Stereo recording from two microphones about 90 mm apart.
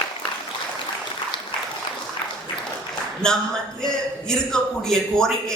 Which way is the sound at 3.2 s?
10° left (ahead or behind).